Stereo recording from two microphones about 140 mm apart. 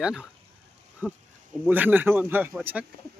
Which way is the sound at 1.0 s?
10° left (ahead or behind).